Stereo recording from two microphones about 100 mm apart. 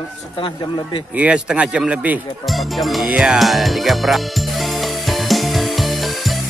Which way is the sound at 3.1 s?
5° right (ahead or behind).